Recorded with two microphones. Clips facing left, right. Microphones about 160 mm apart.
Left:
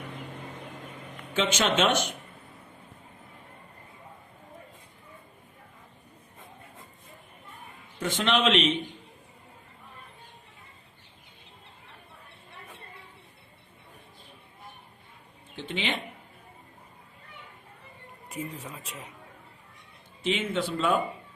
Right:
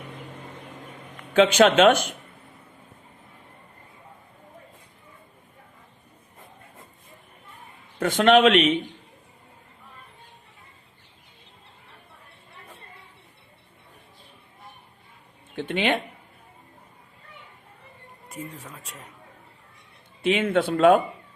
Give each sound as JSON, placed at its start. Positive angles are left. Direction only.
{"t": 1.3, "sound": "speech", "side_deg": -60}
{"t": 7.9, "sound": "a man's voice", "side_deg": -55}
{"t": 15.5, "sound": "speech", "side_deg": -55}
{"t": 18.3, "sound": "speech", "side_deg": 10}
{"t": 20.2, "sound": "speech", "side_deg": -55}